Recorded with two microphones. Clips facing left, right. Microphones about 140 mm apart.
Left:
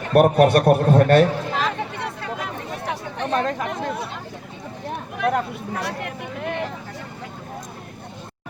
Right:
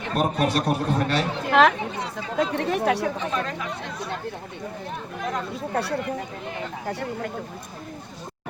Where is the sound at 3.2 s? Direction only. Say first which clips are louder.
Left 5 dB; 65° left (ahead or behind).